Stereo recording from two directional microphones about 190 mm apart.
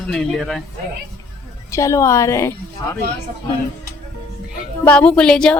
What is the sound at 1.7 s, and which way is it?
Speech, 15° left (ahead or behind).